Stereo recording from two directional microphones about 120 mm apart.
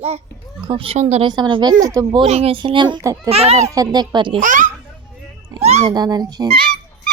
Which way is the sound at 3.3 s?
60° right (ahead or behind).